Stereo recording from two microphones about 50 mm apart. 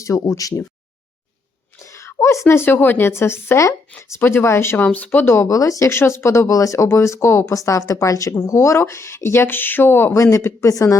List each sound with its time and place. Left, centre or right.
0.0 s speech: left
1.8 s a sound: left
2.1 s speech: left
3.1 s speech: left
4.2 s speech: left
4.8 s speech: left
5.2 s speech: left
10.6 s speech: left